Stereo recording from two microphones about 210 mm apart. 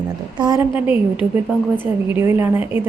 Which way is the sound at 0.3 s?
20° right (ahead or behind).